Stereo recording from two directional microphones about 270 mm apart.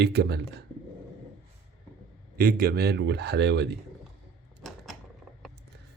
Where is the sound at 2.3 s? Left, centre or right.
Right.